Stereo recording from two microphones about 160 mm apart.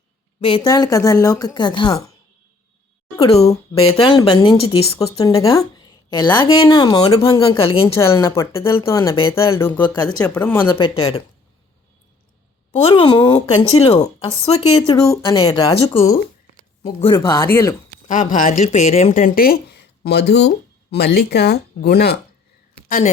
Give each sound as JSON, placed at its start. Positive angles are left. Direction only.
{"t": 0.6, "sound": "speech", "side_deg": 25}
{"t": 3.2, "sound": "speech", "side_deg": 40}
{"t": 5.1, "sound": "speech", "side_deg": 20}
{"t": 7.9, "sound": "speech", "side_deg": 20}
{"t": 10.8, "sound": "speech", "side_deg": 30}
{"t": 12.7, "sound": "speech", "side_deg": 30}
{"t": 14.8, "sound": "speech", "side_deg": 20}
{"t": 16.8, "sound": "speech", "side_deg": 40}
{"t": 17.2, "sound": "speech", "side_deg": 25}
{"t": 18.1, "sound": "speech", "side_deg": 55}
{"t": 22.9, "sound": "speech", "side_deg": 50}